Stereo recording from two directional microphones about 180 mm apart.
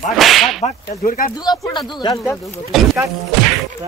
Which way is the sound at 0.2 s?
Centre (ahead or behind).